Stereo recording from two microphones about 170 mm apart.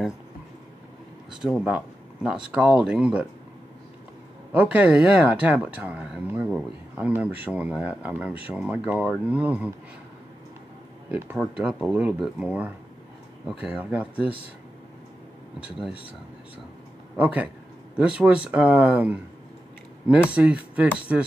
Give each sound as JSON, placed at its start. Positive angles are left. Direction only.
{"t": 1.4, "sound": "speech", "side_deg": -5}
{"t": 4.6, "sound": "speech", "side_deg": -10}
{"t": 11.1, "sound": "speech", "side_deg": -10}
{"t": 15.6, "sound": "speech", "side_deg": 30}
{"t": 17.2, "sound": "speech", "side_deg": -10}